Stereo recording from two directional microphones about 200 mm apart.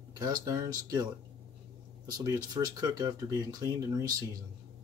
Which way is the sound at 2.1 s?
20° right (ahead or behind).